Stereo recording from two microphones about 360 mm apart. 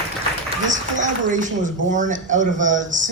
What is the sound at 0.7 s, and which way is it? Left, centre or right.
A woman's voice, right.